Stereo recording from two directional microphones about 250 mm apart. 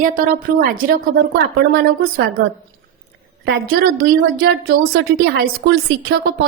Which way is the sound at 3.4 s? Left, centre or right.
Right.